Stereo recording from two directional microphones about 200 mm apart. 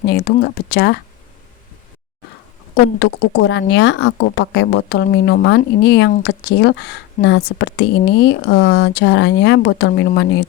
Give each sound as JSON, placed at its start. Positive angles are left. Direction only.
{"t": 0.0, "sound": "speech", "side_deg": 55}
{"t": 3.0, "sound": "speech", "side_deg": 60}